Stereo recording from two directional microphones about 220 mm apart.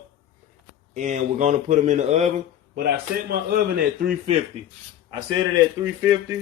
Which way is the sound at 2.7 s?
45° right (ahead or behind).